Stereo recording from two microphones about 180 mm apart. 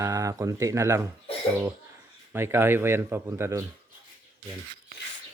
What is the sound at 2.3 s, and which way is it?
Speech, 15° right (ahead or behind).